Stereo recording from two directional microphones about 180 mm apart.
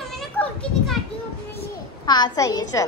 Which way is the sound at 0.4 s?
10° left (ahead or behind).